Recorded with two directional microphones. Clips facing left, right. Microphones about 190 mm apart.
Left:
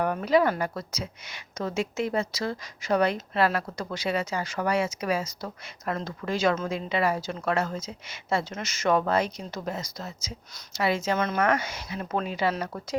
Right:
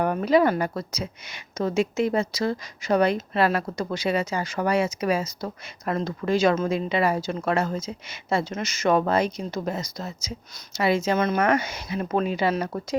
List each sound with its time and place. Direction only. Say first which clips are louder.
0.0 s speech: right 3 dB; 25° right (ahead or behind)